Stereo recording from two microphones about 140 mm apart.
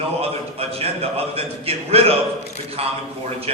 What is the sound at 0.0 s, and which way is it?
A man's voice, 45° right (ahead or behind).